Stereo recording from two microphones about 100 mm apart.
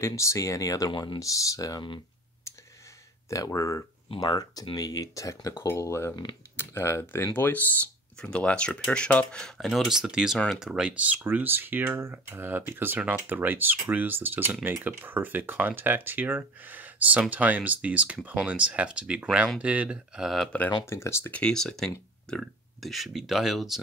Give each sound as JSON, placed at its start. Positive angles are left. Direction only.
{"t": 0.0, "sound": "speech", "side_deg": 30}
{"t": 0.9, "sound": "speech", "side_deg": 50}
{"t": 1.2, "sound": "speech", "side_deg": 35}
{"t": 3.3, "sound": "speech", "side_deg": 35}
{"t": 20.8, "sound": "speech", "side_deg": 25}
{"t": 21.3, "sound": "speech", "side_deg": 10}